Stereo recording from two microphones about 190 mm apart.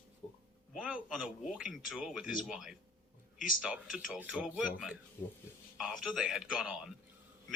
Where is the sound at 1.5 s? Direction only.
Centre (ahead or behind).